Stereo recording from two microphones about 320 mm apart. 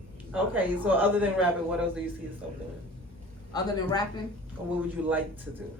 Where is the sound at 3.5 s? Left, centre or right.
Centre.